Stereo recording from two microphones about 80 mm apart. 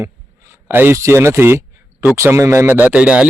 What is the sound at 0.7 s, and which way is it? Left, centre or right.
Speech, right.